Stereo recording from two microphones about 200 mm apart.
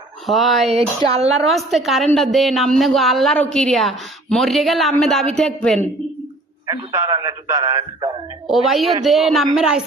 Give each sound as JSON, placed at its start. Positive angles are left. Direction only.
{"t": 0.3, "sound": "speech", "side_deg": 0}
{"t": 0.7, "sound": "speech", "side_deg": -30}
{"t": 1.5, "sound": "speech", "side_deg": 0}
{"t": 6.7, "sound": "a man's voice", "side_deg": -15}
{"t": 8.4, "sound": "speech", "side_deg": 0}